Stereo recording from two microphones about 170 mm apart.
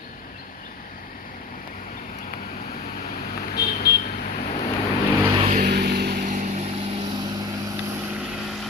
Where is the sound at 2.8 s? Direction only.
50° left (ahead or behind).